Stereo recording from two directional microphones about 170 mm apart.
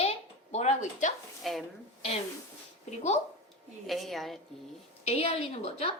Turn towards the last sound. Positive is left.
turn(degrees=35)  # may be behind; listen again after turning